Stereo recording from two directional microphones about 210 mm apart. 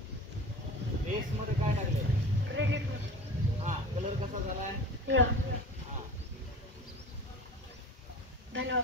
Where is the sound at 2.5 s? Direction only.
60° right (ahead or behind).